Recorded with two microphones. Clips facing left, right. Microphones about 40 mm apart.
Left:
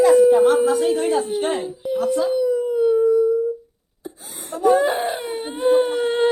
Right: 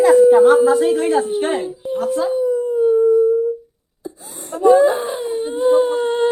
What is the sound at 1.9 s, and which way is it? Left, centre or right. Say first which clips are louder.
Speech: even; right.